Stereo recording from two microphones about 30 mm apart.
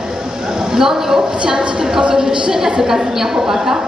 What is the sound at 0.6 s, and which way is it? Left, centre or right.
Speech, centre.